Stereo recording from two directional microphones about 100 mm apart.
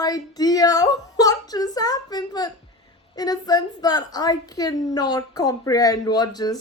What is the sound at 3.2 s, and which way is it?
A woman's voice, 40° left (ahead or behind).